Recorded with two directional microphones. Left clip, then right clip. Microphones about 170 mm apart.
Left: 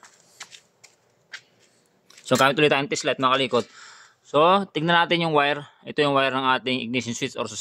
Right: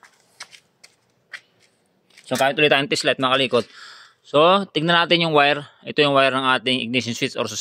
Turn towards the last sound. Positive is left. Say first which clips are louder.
# right 5 dB
turn(degrees=-20)  # may be behind; listen again after turning